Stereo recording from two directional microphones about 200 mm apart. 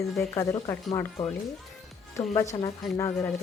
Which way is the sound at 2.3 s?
15° left (ahead or behind).